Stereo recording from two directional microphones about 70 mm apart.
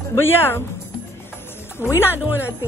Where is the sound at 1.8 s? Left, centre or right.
Left.